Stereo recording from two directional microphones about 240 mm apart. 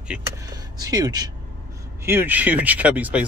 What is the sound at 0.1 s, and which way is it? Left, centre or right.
Speech, centre.